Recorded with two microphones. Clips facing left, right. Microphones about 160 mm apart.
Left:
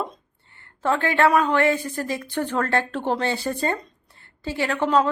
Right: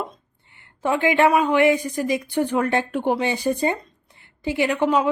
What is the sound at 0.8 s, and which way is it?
Speech, 15° right (ahead or behind).